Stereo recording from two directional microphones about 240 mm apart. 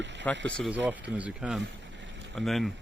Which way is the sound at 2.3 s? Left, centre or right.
Centre.